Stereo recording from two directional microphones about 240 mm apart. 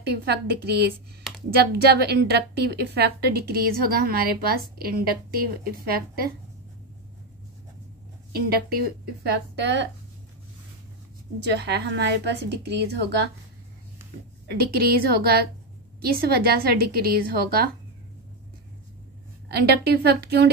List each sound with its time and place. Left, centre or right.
0.0 s a woman's voice: right
8.5 s a woman's voice: right
11.4 s a woman's voice: right
14.7 s a woman's voice: right
19.5 s a woman's voice: right